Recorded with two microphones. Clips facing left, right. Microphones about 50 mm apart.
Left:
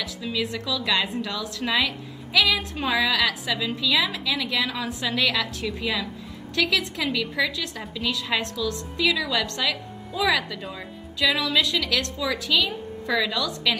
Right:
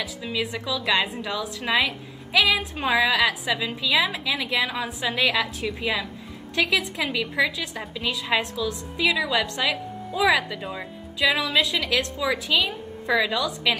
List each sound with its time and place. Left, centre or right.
0.0 s a woman's voice: centre